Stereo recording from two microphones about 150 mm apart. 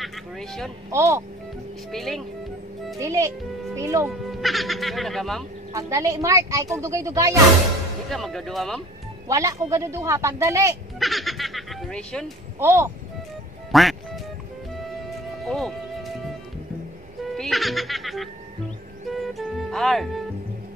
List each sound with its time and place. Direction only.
0.0 s speech: centre (ahead or behind)
0.8 s a woman's voice: 20° right (ahead or behind)
1.9 s speech: centre (ahead or behind)
3.0 s a woman's voice: 20° right (ahead or behind)
4.3 s speech: centre (ahead or behind)
5.7 s a woman's voice: 20° right (ahead or behind)
8.1 s speech: centre (ahead or behind)
9.3 s a woman's voice: 20° right (ahead or behind)
11.0 s speech: centre (ahead or behind)
12.5 s speech: 15° right (ahead or behind)
13.7 s quack: centre (ahead or behind)
15.4 s music: centre (ahead or behind)
17.4 s music: centre (ahead or behind)